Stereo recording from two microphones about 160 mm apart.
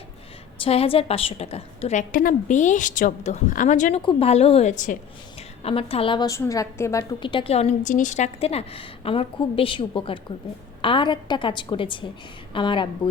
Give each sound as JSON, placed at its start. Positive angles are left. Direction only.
{"t": 0.6, "sound": "a woman's voice", "side_deg": 35}
{"t": 4.0, "sound": "a woman's voice", "side_deg": 40}
{"t": 5.6, "sound": "a woman's voice", "side_deg": 35}
{"t": 7.2, "sound": "a woman's voice", "side_deg": 30}